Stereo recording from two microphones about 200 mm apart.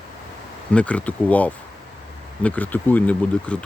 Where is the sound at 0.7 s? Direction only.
5° left (ahead or behind).